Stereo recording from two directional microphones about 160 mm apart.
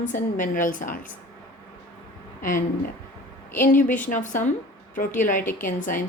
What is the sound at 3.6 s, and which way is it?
A woman's voice, 55° left (ahead or behind).